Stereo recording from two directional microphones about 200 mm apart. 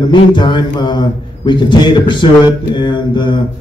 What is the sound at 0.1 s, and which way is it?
A man's voice, 25° left (ahead or behind).